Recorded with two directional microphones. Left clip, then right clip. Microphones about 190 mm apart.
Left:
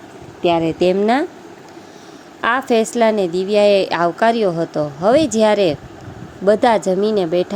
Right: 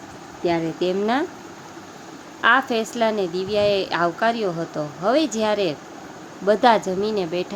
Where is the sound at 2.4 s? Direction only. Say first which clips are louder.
Left 2 dB; 30° left (ahead or behind).